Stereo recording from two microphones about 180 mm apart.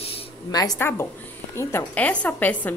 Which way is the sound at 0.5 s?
20° left (ahead or behind).